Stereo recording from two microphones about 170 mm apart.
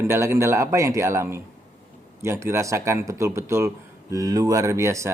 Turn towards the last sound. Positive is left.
turn(degrees=-15)  # may be behind; listen again after turning